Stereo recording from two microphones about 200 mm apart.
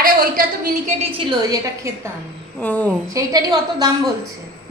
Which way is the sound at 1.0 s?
25° right (ahead or behind).